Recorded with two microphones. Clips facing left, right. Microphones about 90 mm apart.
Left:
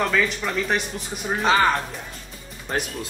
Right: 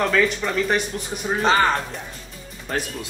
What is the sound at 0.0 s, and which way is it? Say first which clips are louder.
Speech: right 2 dB; centre (ahead or behind).